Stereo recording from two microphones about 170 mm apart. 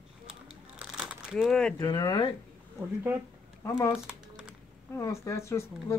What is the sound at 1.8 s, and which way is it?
Speech, 25° left (ahead or behind).